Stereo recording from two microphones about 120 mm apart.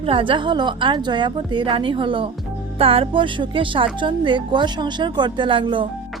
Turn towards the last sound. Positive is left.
turn(degrees=-45)  # may be behind; listen again after turning